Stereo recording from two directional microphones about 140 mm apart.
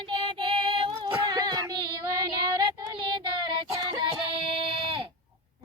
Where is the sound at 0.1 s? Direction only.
35° right (ahead or behind).